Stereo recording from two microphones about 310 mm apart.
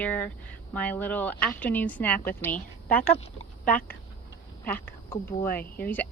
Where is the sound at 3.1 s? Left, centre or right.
Left.